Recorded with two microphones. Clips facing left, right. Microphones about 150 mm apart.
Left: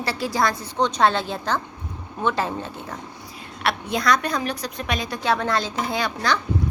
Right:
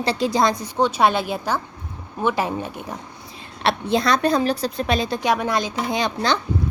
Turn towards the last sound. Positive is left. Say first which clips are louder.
# right 2 dB
turn(degrees=-25)  # may be behind; listen again after turning